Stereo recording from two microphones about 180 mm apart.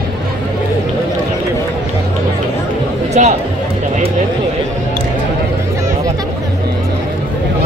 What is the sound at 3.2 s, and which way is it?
Music, 45° right (ahead or behind).